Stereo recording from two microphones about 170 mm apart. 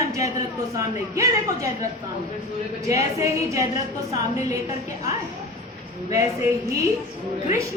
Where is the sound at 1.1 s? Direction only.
15° right (ahead or behind).